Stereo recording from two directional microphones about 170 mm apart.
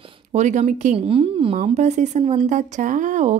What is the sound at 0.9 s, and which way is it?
Speech, 35° right (ahead or behind).